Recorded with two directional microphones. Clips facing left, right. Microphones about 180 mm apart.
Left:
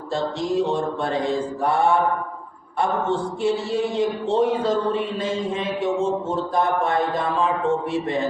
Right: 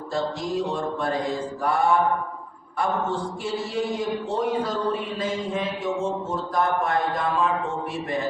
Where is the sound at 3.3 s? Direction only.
25° left (ahead or behind).